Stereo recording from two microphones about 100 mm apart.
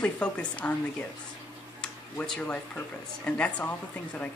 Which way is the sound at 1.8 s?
10° left (ahead or behind).